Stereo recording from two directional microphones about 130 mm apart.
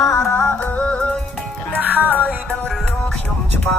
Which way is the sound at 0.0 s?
20° left (ahead or behind).